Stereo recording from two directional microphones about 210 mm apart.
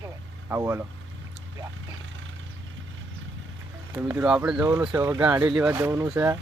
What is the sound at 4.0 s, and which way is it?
Speech, 5° right (ahead or behind).